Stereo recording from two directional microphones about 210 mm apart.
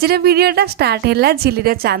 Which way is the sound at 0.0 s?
50° right (ahead or behind).